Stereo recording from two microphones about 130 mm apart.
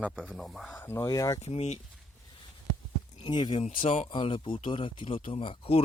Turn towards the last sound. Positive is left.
turn(degrees=45)  # may be behind; listen again after turning